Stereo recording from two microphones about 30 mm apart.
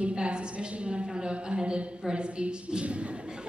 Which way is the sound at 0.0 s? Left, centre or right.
Right.